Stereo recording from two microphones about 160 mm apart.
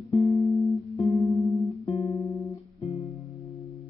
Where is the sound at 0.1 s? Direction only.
20° left (ahead or behind).